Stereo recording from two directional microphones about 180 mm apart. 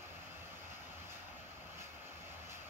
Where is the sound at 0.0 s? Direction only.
15° right (ahead or behind).